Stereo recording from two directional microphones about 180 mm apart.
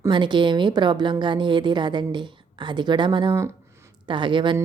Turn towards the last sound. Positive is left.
turn(degrees=-25)  # may be behind; listen again after turning